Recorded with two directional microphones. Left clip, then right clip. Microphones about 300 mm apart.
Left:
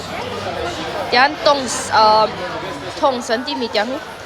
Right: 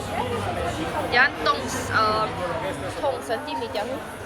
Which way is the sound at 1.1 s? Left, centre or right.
Centre.